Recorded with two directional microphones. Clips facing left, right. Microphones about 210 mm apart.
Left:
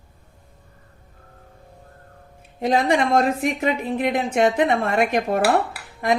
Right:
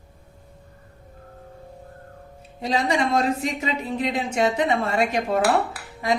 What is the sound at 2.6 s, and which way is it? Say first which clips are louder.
A woman's voice: left 4 dB; 55° left (ahead or behind).